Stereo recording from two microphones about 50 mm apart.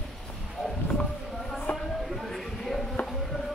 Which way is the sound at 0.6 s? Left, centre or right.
Centre.